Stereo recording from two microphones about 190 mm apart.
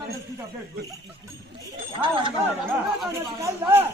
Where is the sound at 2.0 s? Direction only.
25° right (ahead or behind).